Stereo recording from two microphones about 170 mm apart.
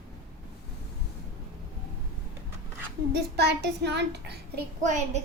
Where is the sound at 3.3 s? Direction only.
80° right.